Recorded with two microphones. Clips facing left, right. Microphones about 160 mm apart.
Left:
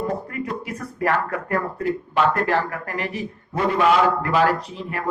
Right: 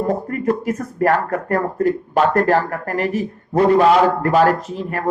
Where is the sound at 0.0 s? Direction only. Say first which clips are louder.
Right 6 dB; 45° right (ahead or behind).